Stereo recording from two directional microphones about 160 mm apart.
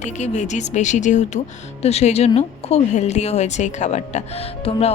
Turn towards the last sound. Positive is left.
turn(degrees=35)  # may be behind; listen again after turning